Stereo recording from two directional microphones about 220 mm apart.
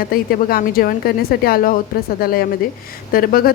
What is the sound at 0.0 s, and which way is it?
A woman's voice, 40° left (ahead or behind).